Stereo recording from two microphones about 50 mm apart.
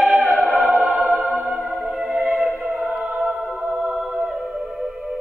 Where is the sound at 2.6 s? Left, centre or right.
Centre.